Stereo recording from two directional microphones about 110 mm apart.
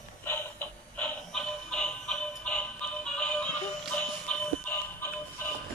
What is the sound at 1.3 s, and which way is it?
Music, 5° left (ahead or behind).